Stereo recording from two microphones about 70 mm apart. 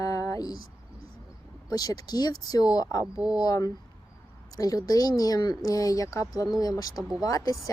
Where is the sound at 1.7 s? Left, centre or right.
Left.